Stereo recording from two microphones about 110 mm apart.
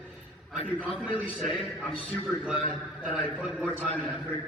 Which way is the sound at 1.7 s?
10° right (ahead or behind).